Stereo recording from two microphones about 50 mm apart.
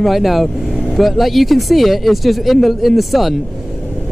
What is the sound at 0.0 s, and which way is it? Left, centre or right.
Speech, centre.